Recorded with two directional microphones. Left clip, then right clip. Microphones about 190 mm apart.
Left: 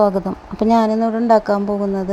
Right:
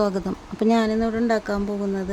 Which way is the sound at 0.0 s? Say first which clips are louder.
Left 8 dB; centre (ahead or behind).